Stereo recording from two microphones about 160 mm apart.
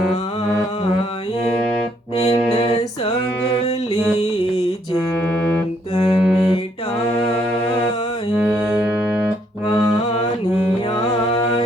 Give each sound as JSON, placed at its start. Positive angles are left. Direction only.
{"t": 6.1, "sound": "music", "side_deg": 0}
{"t": 8.4, "sound": "music", "side_deg": -5}